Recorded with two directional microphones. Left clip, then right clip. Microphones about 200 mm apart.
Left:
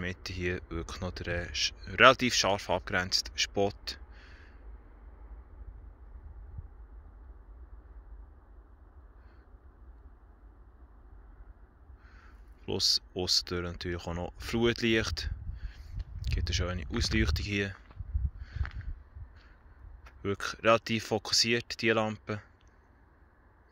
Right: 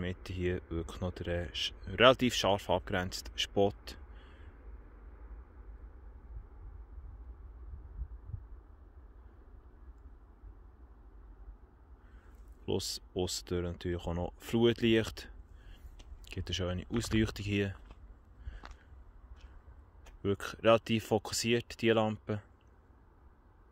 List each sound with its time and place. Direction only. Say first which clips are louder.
0.0 s speech: left 2 dB; 15° right (ahead or behind)
12.6 s speech: left 8 dB; 15° right (ahead or behind)
18.4 s a sound: left 6 dB; 20° right (ahead or behind)
20.1 s speech: left 1 dB; 20° right (ahead or behind)